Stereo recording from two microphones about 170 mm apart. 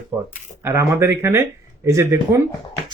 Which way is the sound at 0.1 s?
10° right (ahead or behind).